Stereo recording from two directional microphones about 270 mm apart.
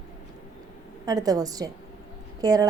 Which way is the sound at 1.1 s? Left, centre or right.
Centre.